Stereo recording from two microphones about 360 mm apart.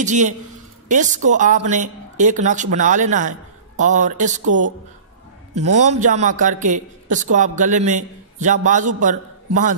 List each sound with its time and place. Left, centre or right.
0.0 s a man's voice: centre
4.5 s a woman's voice: right
5.8 s a man's voice: centre